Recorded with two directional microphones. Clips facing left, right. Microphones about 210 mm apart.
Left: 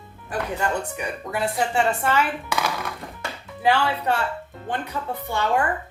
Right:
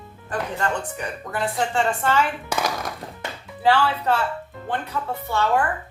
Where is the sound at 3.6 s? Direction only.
15° left (ahead or behind).